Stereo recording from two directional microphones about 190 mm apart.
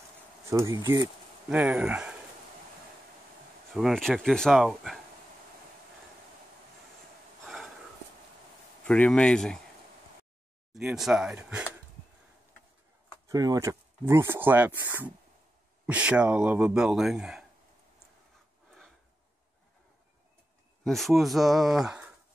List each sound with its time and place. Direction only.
0.5 s speech: 15° right (ahead or behind)
1.5 s speech: 5° right (ahead or behind)
3.7 s speech: centre (ahead or behind)
7.4 s snort: centre (ahead or behind)
8.8 s speech: 5° left (ahead or behind)
10.7 s speech: centre (ahead or behind)
13.3 s speech: 20° right (ahead or behind); by 17.5 s 5° right (ahead or behind)
20.8 s speech: centre (ahead or behind)